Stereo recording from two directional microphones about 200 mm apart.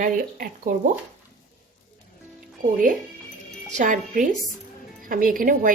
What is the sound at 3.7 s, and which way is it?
A woman's voice, 40° right (ahead or behind).